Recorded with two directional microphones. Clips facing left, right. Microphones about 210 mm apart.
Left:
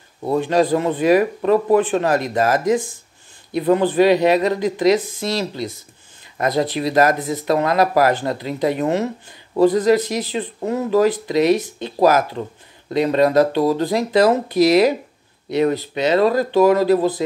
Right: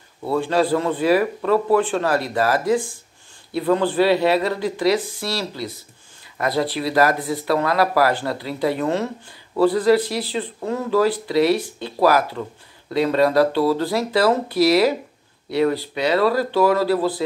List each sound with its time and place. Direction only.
0.2 s speech: 20° left (ahead or behind)